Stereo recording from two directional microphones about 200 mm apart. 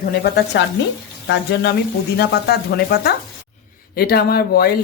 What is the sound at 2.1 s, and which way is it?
Speech, 55° left (ahead or behind).